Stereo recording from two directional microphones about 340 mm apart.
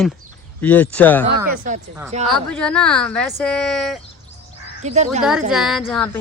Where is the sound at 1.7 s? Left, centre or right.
Right.